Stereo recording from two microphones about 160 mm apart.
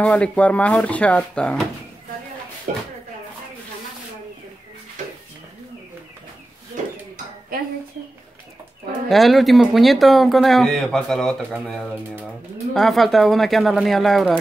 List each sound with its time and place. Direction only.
0.0 s speech: 10° left (ahead or behind)
7.5 s dishes: 65° right (ahead or behind)
9.1 s speech: centre (ahead or behind)